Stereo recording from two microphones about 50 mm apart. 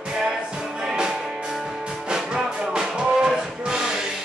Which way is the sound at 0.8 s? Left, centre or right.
Centre.